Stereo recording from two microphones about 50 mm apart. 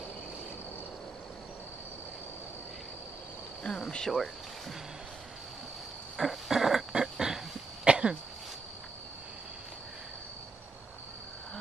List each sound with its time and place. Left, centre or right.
3.6 s cricket: centre
4.1 s speech: centre
6.1 s a sound: centre
7.8 s cough: centre